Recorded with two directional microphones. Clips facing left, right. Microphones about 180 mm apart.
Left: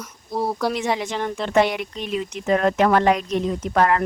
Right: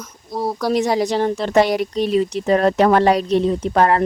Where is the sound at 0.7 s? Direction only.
40° right (ahead or behind).